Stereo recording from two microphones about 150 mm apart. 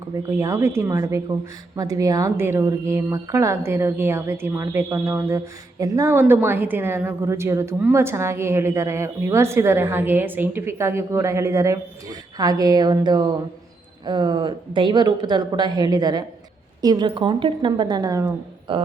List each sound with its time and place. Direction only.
0.2 s a woman's voice: 20° right (ahead or behind)